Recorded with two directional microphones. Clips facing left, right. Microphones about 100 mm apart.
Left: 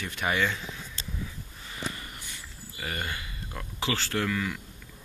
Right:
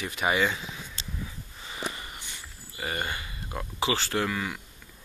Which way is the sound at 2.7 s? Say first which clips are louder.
Right 3 dB; 15° right (ahead or behind).